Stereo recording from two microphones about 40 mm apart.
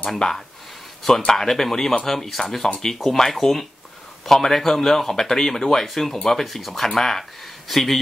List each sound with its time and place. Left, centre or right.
0.2 s speech: centre